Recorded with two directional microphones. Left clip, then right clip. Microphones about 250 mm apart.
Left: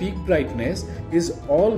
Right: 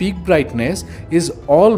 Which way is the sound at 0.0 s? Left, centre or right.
Right.